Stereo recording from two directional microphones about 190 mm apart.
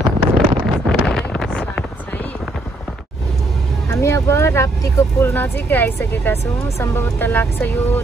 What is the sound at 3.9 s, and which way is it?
Vehicle, 15° left (ahead or behind).